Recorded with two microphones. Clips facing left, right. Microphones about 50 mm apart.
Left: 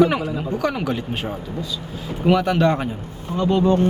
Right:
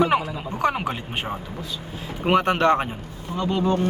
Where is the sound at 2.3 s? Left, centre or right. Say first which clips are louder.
Left 1 dB; right.